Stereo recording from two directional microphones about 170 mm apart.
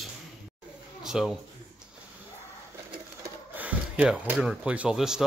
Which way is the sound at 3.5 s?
10° right (ahead or behind).